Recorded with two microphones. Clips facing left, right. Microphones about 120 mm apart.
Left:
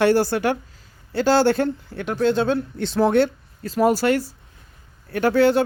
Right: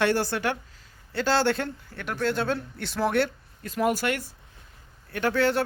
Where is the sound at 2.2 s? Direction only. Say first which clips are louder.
Left 7 dB; 20° left (ahead or behind).